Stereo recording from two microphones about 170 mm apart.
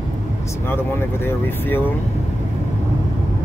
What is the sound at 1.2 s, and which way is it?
Speech, 10° left (ahead or behind).